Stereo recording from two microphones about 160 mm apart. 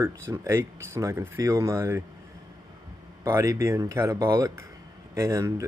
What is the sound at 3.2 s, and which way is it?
Speech, 20° right (ahead or behind).